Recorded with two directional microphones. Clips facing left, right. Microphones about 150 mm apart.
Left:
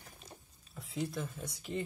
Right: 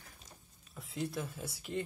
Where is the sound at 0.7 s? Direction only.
Centre (ahead or behind).